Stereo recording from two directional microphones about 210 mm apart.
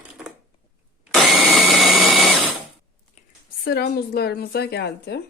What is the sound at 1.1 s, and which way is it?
Drill, centre (ahead or behind).